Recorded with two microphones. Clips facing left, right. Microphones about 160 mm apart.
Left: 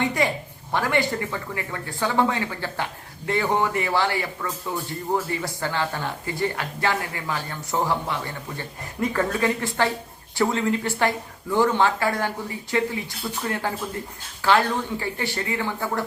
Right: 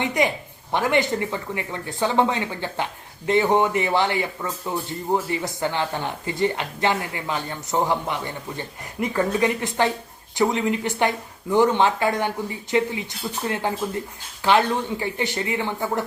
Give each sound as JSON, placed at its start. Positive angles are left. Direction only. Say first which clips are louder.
{"t": 0.0, "sound": "a woman's voice", "louder": "right 1 dB", "side_deg": -20}